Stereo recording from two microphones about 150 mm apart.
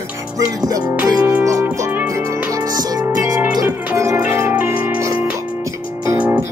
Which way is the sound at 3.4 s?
10° right (ahead or behind).